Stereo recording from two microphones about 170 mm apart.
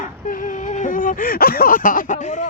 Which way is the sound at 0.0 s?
50° left (ahead or behind).